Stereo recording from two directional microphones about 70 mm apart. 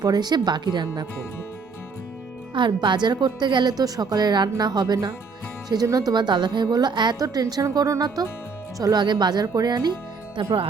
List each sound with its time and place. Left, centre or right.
0.0 s speech: right
2.6 s a woman's voice: right
5.6 s speech: right
7.5 s speech: right
8.8 s a woman's voice: right